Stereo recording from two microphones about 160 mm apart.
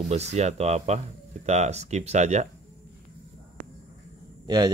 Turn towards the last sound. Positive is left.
turn(degrees=-25)  # may be behind; listen again after turning